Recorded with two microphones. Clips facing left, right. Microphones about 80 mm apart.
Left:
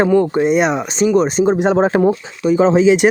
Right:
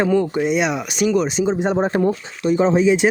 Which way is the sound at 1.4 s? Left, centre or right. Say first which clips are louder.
Left 5 dB; left.